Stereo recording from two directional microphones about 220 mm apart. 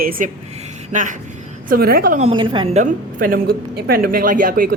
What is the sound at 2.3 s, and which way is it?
A woman's voice, 20° right (ahead or behind).